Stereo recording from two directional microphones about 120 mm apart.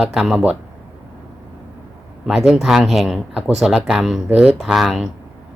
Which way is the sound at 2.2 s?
Centre (ahead or behind).